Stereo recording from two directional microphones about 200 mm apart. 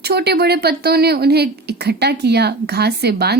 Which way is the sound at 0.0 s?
55° right (ahead or behind).